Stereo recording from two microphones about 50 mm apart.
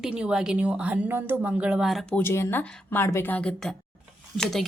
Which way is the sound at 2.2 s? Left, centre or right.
Left.